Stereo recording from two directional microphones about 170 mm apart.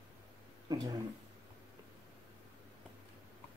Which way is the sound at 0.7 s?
20° right (ahead or behind).